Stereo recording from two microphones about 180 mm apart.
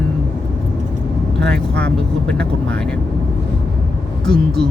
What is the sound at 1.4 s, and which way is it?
Speech, 70° right (ahead or behind).